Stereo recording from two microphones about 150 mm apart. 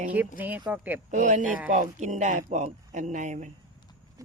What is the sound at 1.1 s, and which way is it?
Speech, 55° right (ahead or behind).